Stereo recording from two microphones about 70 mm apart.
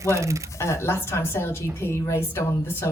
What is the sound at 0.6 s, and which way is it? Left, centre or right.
Speech, left.